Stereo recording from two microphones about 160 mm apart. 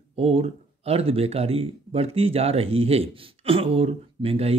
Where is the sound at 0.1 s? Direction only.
40° right (ahead or behind).